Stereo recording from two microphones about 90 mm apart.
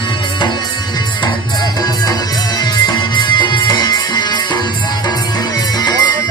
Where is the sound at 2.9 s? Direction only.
55° left (ahead or behind).